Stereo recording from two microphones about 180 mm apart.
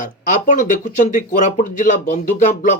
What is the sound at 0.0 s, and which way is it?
Speech, 45° left (ahead or behind).